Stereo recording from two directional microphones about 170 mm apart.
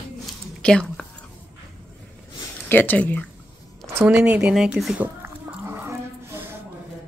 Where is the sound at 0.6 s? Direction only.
5° left (ahead or behind).